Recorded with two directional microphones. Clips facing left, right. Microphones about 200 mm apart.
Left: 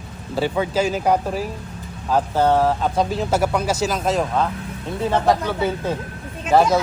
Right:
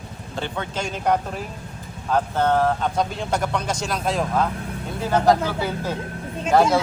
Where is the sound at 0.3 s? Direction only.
5° left (ahead or behind).